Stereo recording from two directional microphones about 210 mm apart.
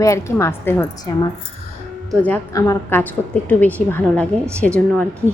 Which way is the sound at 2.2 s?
10° left (ahead or behind).